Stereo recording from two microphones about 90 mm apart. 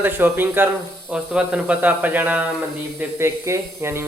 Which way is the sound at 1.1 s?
10° right (ahead or behind).